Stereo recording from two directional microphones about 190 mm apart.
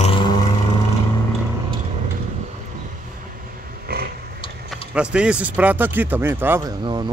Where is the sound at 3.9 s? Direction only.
55° right (ahead or behind).